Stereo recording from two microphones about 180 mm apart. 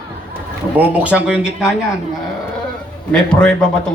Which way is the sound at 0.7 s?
10° right (ahead or behind).